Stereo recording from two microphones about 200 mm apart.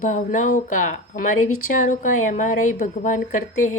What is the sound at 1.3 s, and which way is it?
Speech, 90° left.